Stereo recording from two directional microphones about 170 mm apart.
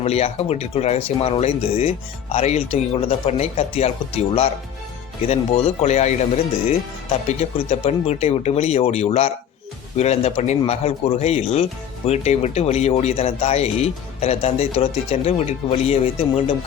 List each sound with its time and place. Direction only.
0.0 s speech: 35° left (ahead or behind)